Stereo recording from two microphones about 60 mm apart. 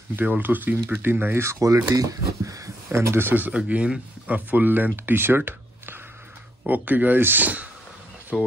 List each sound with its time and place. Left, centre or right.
0.1 s speech: right
1.6 s speech: right
2.0 s speech: right
2.9 s speech: right
3.5 s speech: right
6.6 s speech: right
8.3 s speech: centre